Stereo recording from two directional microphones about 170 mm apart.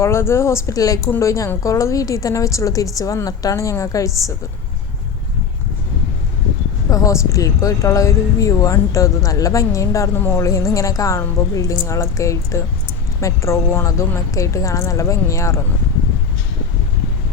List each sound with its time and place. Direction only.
0.0 s a woman's voice: 15° left (ahead or behind)
6.9 s a woman's voice: 20° left (ahead or behind)